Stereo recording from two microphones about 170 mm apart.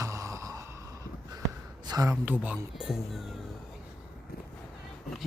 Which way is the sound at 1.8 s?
20° right (ahead or behind).